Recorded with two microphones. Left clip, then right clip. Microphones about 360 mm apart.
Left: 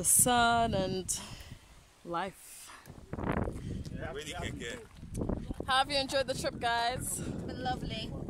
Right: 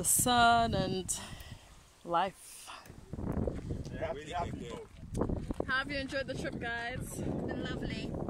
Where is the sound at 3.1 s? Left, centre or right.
Left.